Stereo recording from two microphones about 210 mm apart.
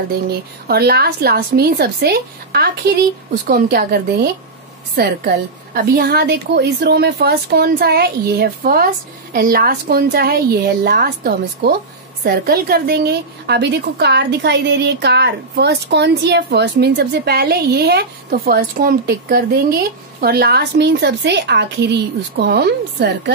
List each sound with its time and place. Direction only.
0.7 s a woman's voice: 50° right (ahead or behind)